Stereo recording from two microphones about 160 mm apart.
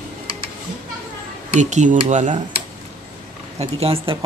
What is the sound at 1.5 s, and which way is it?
Speech, 50° right (ahead or behind).